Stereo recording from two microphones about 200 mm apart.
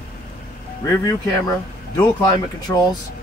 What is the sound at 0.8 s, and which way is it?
Speech, 20° left (ahead or behind).